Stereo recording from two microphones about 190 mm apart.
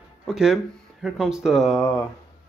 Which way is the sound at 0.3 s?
5° right (ahead or behind).